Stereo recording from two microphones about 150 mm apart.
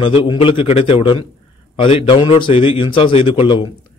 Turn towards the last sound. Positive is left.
turn(degrees=30)  # may be behind; listen again after turning